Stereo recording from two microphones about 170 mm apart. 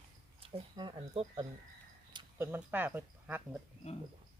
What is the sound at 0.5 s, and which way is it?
Speech, 30° right (ahead or behind).